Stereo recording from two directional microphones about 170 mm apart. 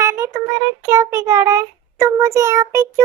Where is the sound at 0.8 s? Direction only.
15° right (ahead or behind).